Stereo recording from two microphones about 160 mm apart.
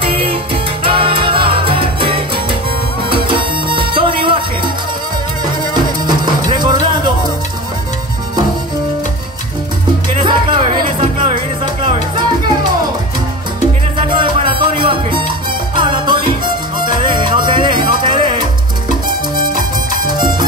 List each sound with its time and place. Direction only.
0.0 s salsa music: 35° right (ahead or behind)
0.8 s music: 35° right (ahead or behind)
6.0 s music: 30° right (ahead or behind)
10.1 s music: 30° right (ahead or behind)
14.0 s music: 30° right (ahead or behind)
20.1 s music: 25° right (ahead or behind)